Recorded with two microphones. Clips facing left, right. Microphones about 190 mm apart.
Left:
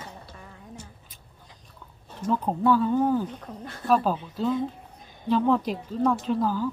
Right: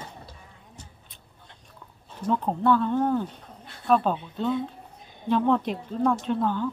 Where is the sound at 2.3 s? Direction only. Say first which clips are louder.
Even; 5° left (ahead or behind).